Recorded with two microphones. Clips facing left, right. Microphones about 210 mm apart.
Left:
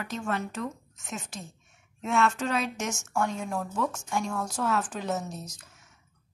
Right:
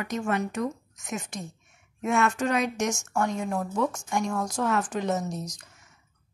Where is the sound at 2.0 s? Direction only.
15° right (ahead or behind).